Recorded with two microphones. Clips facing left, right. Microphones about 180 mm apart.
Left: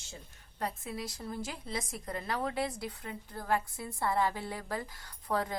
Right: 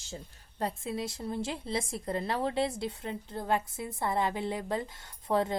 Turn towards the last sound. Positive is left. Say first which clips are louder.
# right 5 dB
turn(degrees=-25)  # may be behind; listen again after turning